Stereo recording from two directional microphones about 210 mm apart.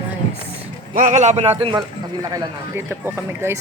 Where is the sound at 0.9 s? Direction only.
35° right (ahead or behind).